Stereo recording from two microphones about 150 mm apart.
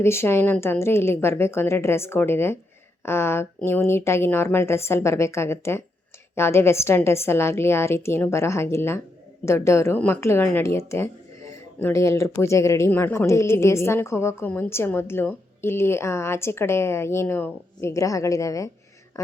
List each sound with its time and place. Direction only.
0.0 s a woman's voice: 15° left (ahead or behind)